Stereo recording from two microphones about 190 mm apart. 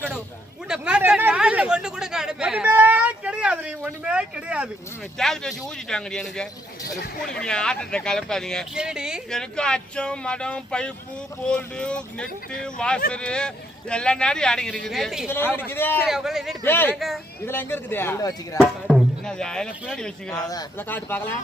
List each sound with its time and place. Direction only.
0.7 s a sound: 5° right (ahead or behind)
5.1 s speech: 5° left (ahead or behind)
6.8 s speech: 50° left (ahead or behind)
7.4 s speech: 5° left (ahead or behind)
15.3 s speech: 10° left (ahead or behind)
16.0 s speech: centre (ahead or behind)
16.6 s speech: 10° left (ahead or behind)
18.5 s speech: centre (ahead or behind)
20.5 s speech: 15° left (ahead or behind)